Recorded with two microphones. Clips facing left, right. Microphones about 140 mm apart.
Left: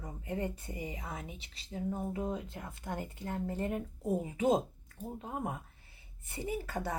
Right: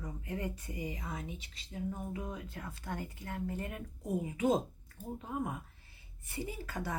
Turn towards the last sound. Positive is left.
turn(degrees=25)  # may be behind; listen again after turning